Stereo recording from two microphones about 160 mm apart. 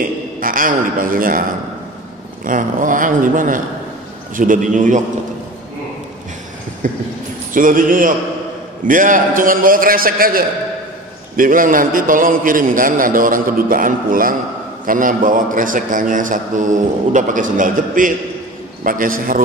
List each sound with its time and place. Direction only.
0.4 s a man's voice: 60° right (ahead or behind)
2.4 s a man's voice: 55° right (ahead or behind)
6.8 s a man's voice: 55° right (ahead or behind)